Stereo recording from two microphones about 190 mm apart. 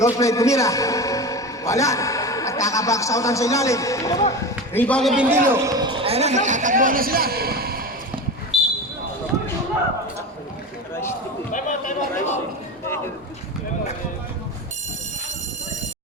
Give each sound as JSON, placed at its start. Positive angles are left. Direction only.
{"t": 0.0, "sound": "a man's voice", "side_deg": 15}
{"t": 5.3, "sound": "a man's voice", "side_deg": -15}
{"t": 11.5, "sound": "a sound", "side_deg": 40}